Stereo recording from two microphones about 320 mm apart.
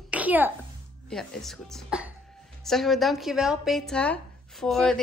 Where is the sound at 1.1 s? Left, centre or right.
Centre.